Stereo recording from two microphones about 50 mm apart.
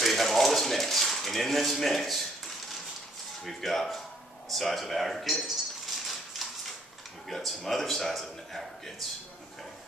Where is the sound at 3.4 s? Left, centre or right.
Centre.